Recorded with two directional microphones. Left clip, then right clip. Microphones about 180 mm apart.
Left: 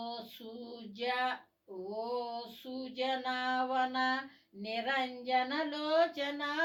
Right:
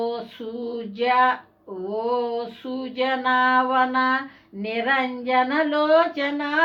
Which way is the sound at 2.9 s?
40° right (ahead or behind).